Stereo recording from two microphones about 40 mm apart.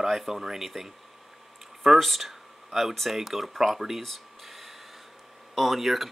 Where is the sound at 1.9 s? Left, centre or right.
Centre.